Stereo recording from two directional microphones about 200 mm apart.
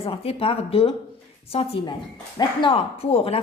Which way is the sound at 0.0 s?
30° left (ahead or behind).